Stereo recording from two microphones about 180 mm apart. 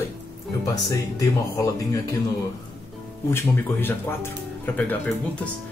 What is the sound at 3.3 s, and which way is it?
Speech, 10° left (ahead or behind).